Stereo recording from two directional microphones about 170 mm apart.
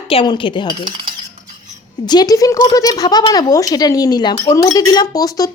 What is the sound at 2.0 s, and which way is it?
Speech, 25° left (ahead or behind).